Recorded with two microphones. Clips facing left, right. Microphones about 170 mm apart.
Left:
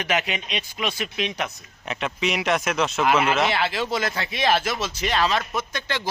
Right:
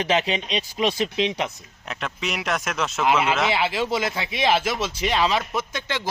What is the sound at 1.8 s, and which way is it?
Speech, centre (ahead or behind).